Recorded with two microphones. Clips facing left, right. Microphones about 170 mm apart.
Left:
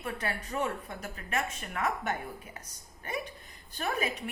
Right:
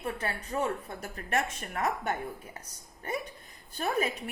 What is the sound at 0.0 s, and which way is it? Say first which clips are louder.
Speech: right 1 dB; 30° right (ahead or behind).